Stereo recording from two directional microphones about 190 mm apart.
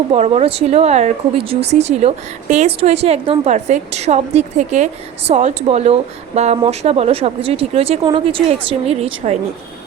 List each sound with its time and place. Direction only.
0.1 s speech: 35° right (ahead or behind)